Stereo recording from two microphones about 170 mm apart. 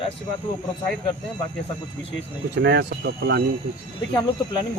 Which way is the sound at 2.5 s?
85° right.